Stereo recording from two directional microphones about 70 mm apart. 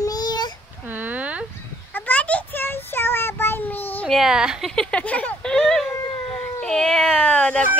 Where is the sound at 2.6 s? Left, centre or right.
Left.